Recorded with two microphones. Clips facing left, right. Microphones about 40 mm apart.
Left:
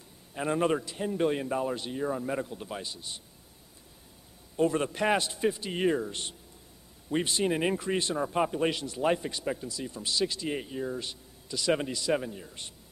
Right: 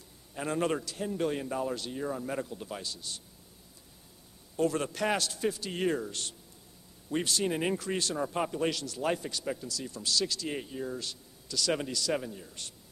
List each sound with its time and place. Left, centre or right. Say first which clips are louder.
0.3 s a man's voice: left 3 dB; centre
4.6 s a man's voice: left 3 dB; left
8.2 s a man's voice: left 3 dB; centre
10.5 s a man's voice: left 3 dB; centre
11.0 s a man's voice: left 2 dB; left